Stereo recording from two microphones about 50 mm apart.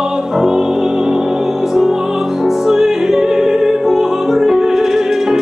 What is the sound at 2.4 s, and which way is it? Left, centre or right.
Music, centre.